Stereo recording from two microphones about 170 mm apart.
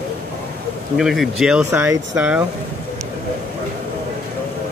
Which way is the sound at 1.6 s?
15° right (ahead or behind).